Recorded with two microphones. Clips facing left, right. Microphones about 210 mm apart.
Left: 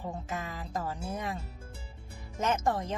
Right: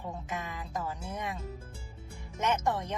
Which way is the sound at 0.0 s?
35° left (ahead or behind).